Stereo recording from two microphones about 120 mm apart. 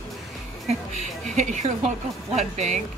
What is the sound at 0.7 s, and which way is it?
Speech, 75° right (ahead or behind).